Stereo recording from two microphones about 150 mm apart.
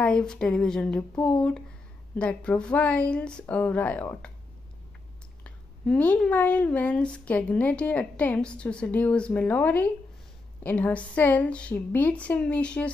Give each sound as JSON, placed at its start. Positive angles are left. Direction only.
{"t": 0.0, "sound": "speech", "side_deg": 5}
{"t": 5.4, "sound": "speech", "side_deg": 10}